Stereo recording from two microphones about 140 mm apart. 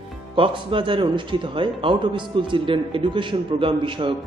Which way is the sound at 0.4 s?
40° right (ahead or behind).